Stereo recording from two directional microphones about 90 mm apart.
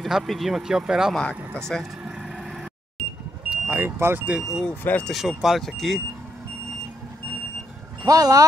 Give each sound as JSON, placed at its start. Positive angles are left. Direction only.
{"t": 0.0, "sound": "speech", "side_deg": 0}
{"t": 1.7, "sound": "speech", "side_deg": 5}
{"t": 2.0, "sound": "vehicle", "side_deg": -5}
{"t": 3.4, "sound": "vehicle", "side_deg": -15}
{"t": 3.8, "sound": "speech", "side_deg": -25}
{"t": 4.3, "sound": "speech", "side_deg": -5}
{"t": 4.6, "sound": "speech", "side_deg": 15}
{"t": 5.1, "sound": "speech", "side_deg": -5}
{"t": 8.0, "sound": "speech", "side_deg": -40}